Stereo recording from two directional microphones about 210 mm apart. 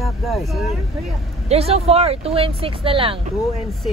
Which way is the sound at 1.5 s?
30° right (ahead or behind).